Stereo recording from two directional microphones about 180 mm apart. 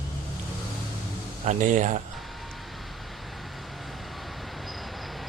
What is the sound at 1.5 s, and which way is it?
Speech, 45° right (ahead or behind).